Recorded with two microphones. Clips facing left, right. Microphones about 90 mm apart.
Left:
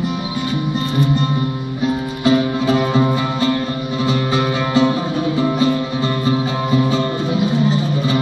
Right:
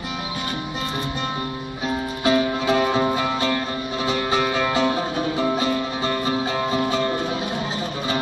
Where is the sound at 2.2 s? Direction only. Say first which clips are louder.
Left 4 dB; 40° right (ahead or behind).